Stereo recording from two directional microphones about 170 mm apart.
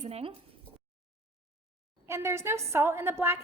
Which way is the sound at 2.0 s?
15° right (ahead or behind).